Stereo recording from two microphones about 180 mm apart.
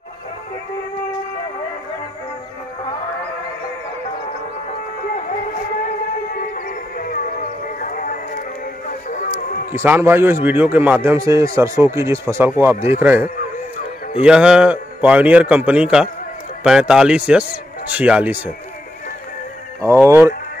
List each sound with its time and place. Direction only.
6.3 s music: 50° left (ahead or behind)
9.7 s a man's voice: 10° right (ahead or behind)
19.8 s a man's voice: 15° right (ahead or behind)